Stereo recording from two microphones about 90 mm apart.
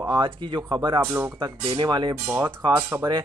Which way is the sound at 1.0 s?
20° right (ahead or behind).